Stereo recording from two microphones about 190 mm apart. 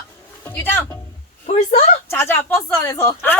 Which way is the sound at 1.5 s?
40° left (ahead or behind).